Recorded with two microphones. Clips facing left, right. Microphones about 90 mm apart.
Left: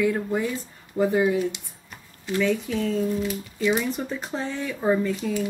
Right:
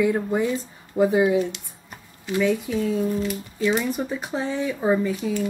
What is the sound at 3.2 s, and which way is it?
Speech, centre (ahead or behind).